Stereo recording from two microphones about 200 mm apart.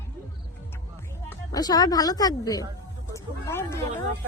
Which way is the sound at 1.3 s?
20° left (ahead or behind).